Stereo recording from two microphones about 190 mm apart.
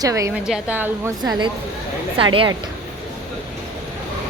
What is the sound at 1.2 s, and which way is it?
A woman's voice, 20° right (ahead or behind).